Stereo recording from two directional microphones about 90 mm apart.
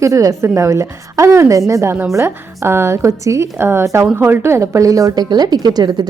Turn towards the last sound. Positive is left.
turn(degrees=-45)  # may be behind; listen again after turning